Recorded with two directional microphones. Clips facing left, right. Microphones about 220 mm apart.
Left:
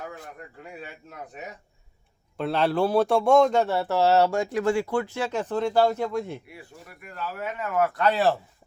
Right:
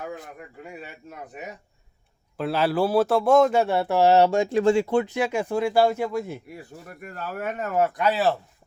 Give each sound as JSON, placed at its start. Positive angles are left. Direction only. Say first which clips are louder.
{"t": 2.4, "sound": "a man's voice", "louder": "right 1 dB", "side_deg": -5}
{"t": 6.5, "sound": "speech", "louder": "right 5 dB", "side_deg": -45}
{"t": 7.8, "sound": "speech", "louder": "right 1 dB", "side_deg": -20}
{"t": 8.0, "sound": "speech", "louder": "left 2 dB", "side_deg": -5}